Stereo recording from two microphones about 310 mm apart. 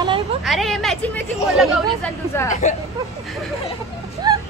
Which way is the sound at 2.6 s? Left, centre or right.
Left.